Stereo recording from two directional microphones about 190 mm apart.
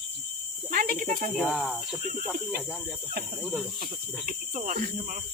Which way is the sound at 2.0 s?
50° right (ahead or behind).